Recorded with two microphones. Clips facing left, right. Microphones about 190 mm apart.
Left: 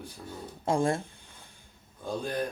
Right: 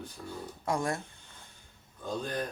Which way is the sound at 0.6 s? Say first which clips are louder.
Left 5 dB; 30° left (ahead or behind).